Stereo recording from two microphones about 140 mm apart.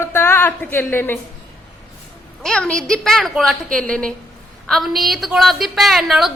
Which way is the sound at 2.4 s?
5° left (ahead or behind).